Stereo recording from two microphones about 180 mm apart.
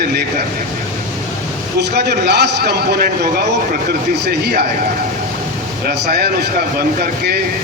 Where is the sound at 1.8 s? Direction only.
65° right (ahead or behind).